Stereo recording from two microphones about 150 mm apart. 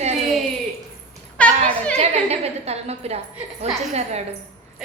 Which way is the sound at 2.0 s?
45° right (ahead or behind).